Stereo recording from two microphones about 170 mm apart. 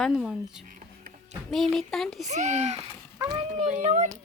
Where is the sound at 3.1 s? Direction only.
20° right (ahead or behind).